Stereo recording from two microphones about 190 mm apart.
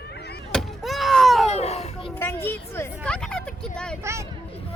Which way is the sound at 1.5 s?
35° left (ahead or behind).